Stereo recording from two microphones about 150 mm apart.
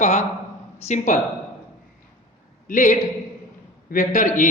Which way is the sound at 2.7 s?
60° left (ahead or behind).